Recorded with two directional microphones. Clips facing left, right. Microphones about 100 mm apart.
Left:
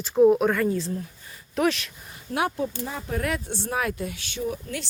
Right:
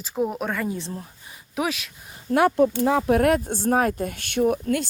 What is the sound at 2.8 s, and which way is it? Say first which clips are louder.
Speech: right 11 dB; 80° right.